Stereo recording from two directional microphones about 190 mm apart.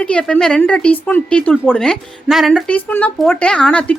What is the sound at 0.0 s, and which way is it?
A woman's voice, 5° left (ahead or behind).